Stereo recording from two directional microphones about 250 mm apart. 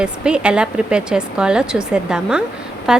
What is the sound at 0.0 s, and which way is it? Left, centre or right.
A woman's voice, centre.